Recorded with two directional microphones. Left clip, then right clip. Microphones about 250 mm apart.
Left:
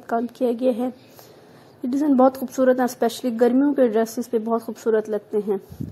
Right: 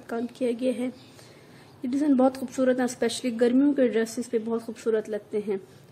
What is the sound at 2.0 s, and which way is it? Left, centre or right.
A woman's voice, centre.